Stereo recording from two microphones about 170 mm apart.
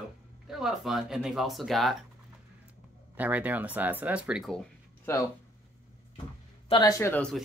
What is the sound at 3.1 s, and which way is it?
Speech, 10° right (ahead or behind).